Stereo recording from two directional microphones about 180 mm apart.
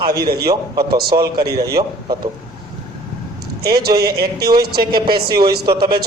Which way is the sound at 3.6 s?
60° right (ahead or behind).